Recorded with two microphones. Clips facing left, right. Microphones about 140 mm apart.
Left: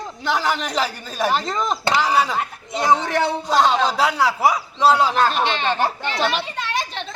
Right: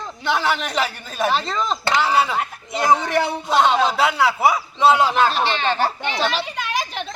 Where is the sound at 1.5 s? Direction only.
15° left (ahead or behind).